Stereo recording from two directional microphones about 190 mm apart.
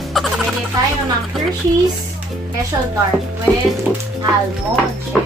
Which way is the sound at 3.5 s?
5° left (ahead or behind).